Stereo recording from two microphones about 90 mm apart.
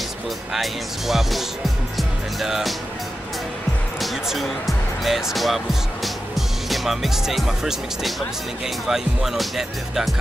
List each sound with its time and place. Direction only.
0.5 s speech: 5° right (ahead or behind)
4.0 s speech: centre (ahead or behind)